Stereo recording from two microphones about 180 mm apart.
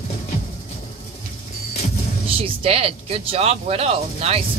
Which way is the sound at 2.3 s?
30° right (ahead or behind).